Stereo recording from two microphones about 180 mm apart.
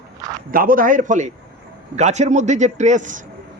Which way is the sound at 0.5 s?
50° right (ahead or behind).